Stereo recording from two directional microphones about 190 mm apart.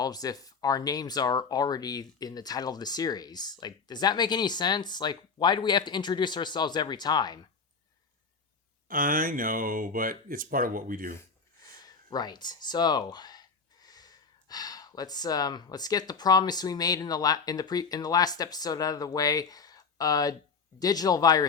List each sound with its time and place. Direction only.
0.0 s speech: 20° left (ahead or behind)
8.9 s speech: 45° right (ahead or behind)
11.8 s speech: 20° left (ahead or behind)